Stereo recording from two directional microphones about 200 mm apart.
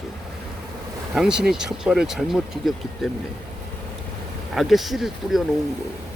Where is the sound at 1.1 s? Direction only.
5° right (ahead or behind).